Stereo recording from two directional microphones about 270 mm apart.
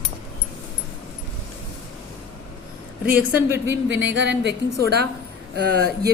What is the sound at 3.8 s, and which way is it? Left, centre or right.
Speech, right.